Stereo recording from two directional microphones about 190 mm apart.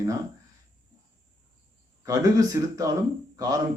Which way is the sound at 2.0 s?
20° right (ahead or behind).